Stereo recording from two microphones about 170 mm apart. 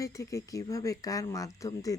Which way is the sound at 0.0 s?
20° left (ahead or behind).